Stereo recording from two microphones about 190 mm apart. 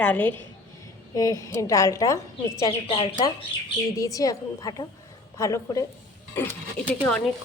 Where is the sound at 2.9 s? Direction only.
30° left (ahead or behind).